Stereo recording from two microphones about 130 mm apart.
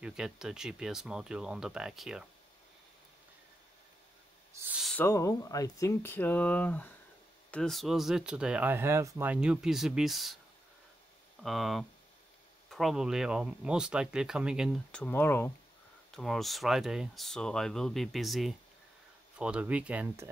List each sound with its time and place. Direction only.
0.0 s speech: 5° right (ahead or behind)
4.9 s speech: 20° left (ahead or behind); by 10.3 s centre (ahead or behind)
11.4 s speech: centre (ahead or behind)
14.9 s speech: 10° left (ahead or behind)
16.1 s speech: 5° left (ahead or behind)